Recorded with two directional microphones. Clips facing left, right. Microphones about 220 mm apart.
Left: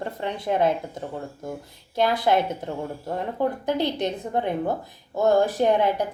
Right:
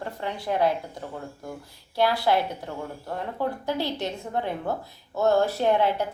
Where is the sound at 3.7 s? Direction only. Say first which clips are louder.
Left 4 dB; 20° left (ahead or behind).